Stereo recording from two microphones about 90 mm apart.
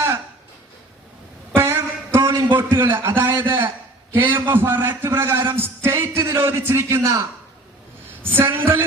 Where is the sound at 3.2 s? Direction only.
25° right (ahead or behind).